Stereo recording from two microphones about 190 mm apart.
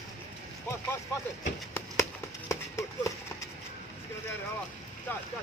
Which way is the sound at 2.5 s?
15° left (ahead or behind).